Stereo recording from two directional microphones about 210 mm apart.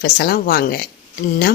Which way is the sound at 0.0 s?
45° left (ahead or behind).